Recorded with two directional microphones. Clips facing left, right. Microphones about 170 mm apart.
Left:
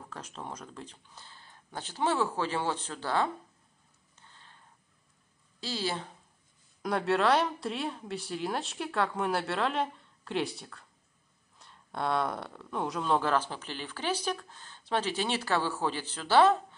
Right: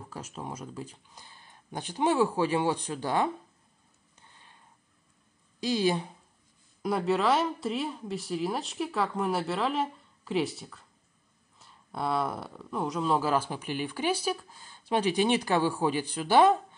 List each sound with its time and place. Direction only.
0.1 s speech: 10° right (ahead or behind)
4.1 s a sound: 15° right (ahead or behind)
5.6 s speech: 15° right (ahead or behind)
6.8 s a woman's voice: 5° right (ahead or behind)